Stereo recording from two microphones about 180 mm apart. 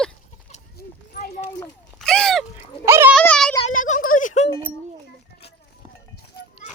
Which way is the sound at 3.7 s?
45° left (ahead or behind).